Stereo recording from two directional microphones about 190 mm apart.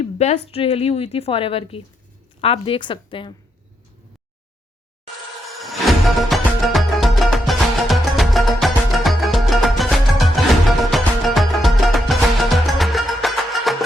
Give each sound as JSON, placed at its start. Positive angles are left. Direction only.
{"t": 0.0, "sound": "a sound", "side_deg": 35}
{"t": 0.5, "sound": "a woman's voice", "side_deg": 30}
{"t": 5.5, "sound": "music", "side_deg": 0}